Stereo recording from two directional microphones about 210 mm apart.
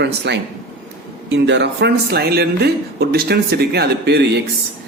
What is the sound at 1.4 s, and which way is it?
A man's voice, 55° right (ahead or behind).